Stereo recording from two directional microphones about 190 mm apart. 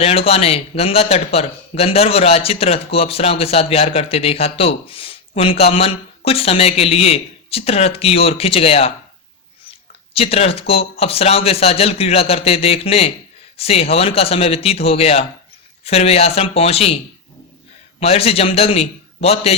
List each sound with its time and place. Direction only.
0.0 s a man's voice: 30° left (ahead or behind)
10.2 s a man's voice: 30° left (ahead or behind)
18.0 s a man's voice: 30° left (ahead or behind)